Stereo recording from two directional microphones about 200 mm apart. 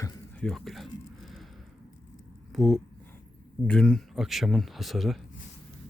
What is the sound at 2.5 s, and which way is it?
Speech, centre (ahead or behind).